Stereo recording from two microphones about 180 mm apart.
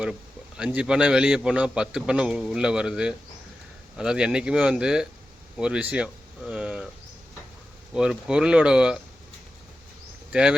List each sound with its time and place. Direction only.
0.0 s a man's voice: 5° right (ahead or behind)
7.9 s a man's voice: 5° right (ahead or behind)